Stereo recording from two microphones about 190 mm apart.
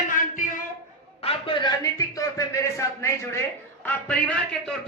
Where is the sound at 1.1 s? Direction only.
30° left (ahead or behind).